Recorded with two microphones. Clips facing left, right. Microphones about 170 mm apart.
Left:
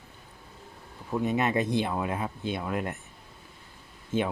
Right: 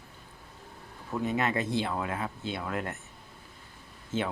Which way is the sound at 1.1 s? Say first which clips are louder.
Left 3 dB; 20° left (ahead or behind).